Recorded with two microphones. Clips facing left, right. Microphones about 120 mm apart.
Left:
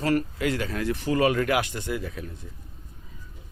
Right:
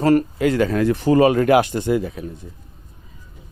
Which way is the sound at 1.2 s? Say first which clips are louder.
Right 8 dB; 30° right (ahead or behind).